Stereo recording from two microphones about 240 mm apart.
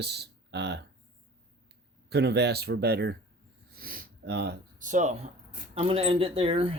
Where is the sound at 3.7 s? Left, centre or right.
Right.